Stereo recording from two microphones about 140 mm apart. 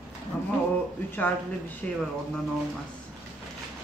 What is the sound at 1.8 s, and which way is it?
Speech, 10° left (ahead or behind).